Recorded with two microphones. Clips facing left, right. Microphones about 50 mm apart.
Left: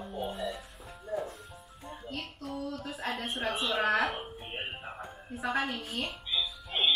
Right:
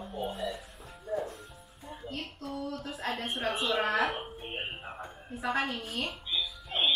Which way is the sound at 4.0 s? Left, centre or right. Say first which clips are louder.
Right 1 dB; centre.